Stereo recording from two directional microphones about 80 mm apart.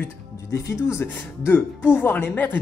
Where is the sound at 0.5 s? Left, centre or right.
Left.